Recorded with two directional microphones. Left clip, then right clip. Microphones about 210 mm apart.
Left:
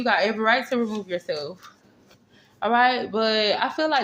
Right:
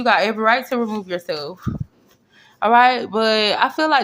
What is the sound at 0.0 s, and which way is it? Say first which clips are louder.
Speech: right 5 dB; 25° right (ahead or behind).